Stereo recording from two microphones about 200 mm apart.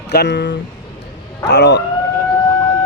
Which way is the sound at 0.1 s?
60° left (ahead or behind).